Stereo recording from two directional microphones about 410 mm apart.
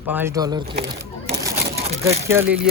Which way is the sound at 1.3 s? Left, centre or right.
Centre.